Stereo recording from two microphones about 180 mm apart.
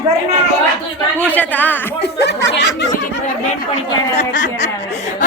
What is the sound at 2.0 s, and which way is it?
Speech, 65° left (ahead or behind).